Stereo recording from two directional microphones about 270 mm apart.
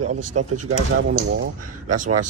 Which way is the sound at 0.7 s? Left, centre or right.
Right.